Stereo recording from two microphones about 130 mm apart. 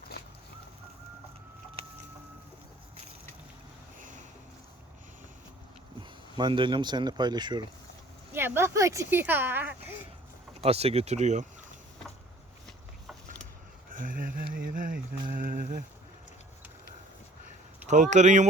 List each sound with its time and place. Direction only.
6.0 s speech: 35° right (ahead or behind)
8.3 s speech: 15° right (ahead or behind)
10.6 s speech: 50° right (ahead or behind)
13.9 s a sound: 90° right
15.3 s speech: 90° right
17.8 s speech: 65° right (ahead or behind)